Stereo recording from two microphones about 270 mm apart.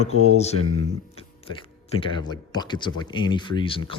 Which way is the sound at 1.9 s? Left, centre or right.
Centre.